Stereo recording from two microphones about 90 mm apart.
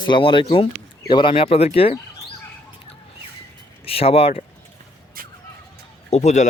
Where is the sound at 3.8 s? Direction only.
90° left.